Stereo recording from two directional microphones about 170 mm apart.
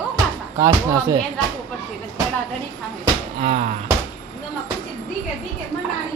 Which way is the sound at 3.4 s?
40° right (ahead or behind).